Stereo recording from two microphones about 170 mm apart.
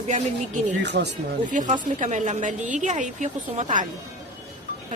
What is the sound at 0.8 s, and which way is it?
Speech, 85° right.